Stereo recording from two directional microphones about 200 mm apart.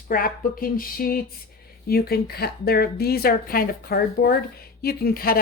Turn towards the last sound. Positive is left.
turn(degrees=50)  # may be behind; listen again after turning